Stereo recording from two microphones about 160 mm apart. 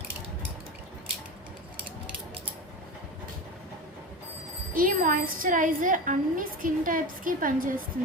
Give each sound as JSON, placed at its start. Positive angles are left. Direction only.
{"t": 4.7, "sound": "a woman's voice", "side_deg": -60}